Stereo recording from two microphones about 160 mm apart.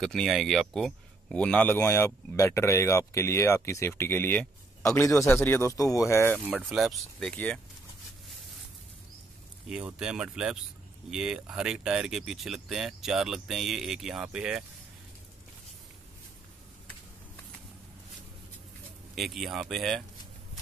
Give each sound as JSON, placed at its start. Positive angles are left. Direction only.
{"t": 0.0, "sound": "speech", "side_deg": 0}
{"t": 6.4, "sound": "speech", "side_deg": -5}
{"t": 9.7, "sound": "speech", "side_deg": -5}
{"t": 19.1, "sound": "speech", "side_deg": 0}